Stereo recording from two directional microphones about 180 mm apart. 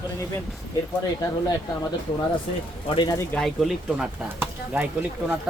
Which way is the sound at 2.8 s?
25° left (ahead or behind).